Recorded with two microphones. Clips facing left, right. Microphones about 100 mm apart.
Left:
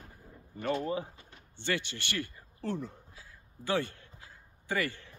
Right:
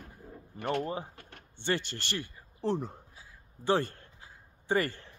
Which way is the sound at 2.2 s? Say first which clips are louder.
Right 3 dB; 20° right (ahead or behind).